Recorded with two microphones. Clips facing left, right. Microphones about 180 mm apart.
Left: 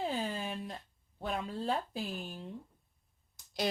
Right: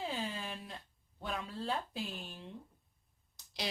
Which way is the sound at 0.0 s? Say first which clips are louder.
Left 4 dB; 45° left (ahead or behind).